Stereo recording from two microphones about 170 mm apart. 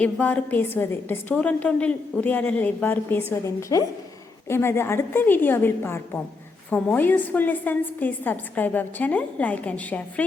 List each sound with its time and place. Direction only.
0.0 s a woman's voice: 10° left (ahead or behind)